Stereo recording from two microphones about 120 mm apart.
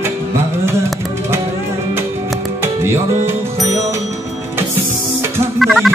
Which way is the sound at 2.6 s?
20° right (ahead or behind).